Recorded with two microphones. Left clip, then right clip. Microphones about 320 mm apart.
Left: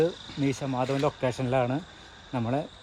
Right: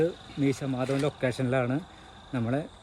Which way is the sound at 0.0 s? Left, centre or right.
Centre.